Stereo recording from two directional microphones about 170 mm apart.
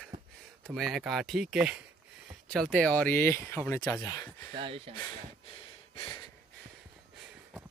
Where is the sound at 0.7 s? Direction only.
Centre (ahead or behind); by 4.5 s 20° left (ahead or behind).